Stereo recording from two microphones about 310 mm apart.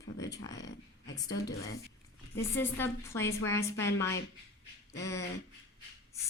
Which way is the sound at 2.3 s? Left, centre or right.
Centre.